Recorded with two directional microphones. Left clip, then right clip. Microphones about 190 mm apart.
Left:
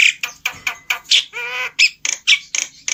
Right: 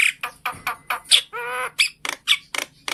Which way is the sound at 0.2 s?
25° right (ahead or behind).